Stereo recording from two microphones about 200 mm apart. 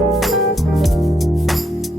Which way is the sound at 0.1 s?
Centre (ahead or behind).